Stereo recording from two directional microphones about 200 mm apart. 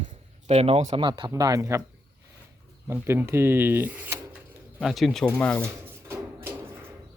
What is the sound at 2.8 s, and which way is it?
Speech, 10° right (ahead or behind).